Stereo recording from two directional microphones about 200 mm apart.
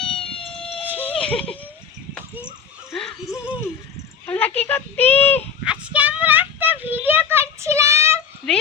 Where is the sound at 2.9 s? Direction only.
Centre (ahead or behind).